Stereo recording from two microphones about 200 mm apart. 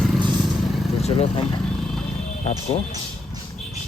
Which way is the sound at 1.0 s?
30° left (ahead or behind).